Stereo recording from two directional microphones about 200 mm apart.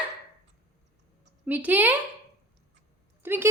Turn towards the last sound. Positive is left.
turn(degrees=-10)  # may be behind; listen again after turning